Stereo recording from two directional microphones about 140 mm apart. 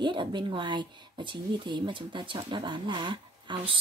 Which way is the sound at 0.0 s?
35° right (ahead or behind).